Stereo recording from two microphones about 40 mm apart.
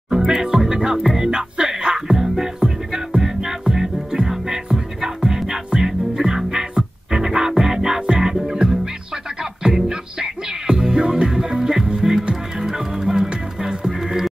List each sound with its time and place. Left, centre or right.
0.4 s music: centre